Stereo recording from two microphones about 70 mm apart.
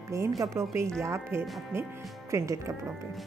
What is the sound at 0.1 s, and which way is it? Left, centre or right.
A woman's voice, right.